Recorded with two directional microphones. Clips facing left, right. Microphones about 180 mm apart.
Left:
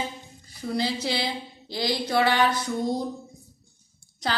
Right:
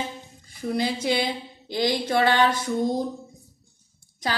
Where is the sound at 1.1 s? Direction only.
20° right (ahead or behind).